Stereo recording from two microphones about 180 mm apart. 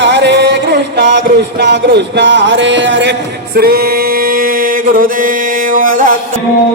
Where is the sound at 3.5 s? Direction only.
60° right (ahead or behind).